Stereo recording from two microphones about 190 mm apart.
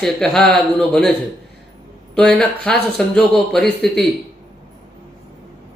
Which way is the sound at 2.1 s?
5° left (ahead or behind).